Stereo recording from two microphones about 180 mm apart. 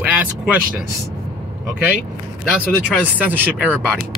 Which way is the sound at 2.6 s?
10° left (ahead or behind).